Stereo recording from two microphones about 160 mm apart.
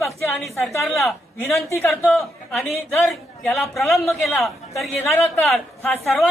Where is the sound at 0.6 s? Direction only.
15° left (ahead or behind).